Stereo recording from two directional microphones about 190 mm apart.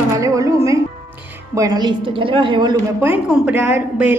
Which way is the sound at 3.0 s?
10° right (ahead or behind).